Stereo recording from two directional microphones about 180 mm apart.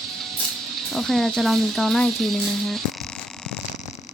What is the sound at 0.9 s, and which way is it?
Speech, centre (ahead or behind).